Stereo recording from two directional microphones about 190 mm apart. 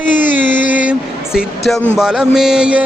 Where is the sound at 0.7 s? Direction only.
5° right (ahead or behind).